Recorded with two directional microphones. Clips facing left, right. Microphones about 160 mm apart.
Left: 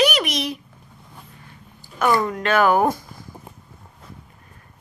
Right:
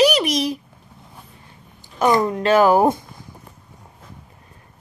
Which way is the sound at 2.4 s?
35° right (ahead or behind).